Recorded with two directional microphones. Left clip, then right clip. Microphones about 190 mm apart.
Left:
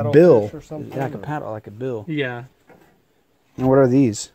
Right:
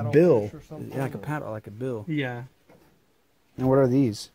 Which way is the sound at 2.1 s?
35° right (ahead or behind).